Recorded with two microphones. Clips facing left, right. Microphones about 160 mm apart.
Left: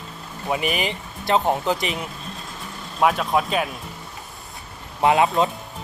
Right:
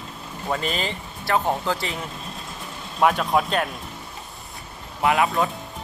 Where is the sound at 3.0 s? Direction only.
Centre (ahead or behind).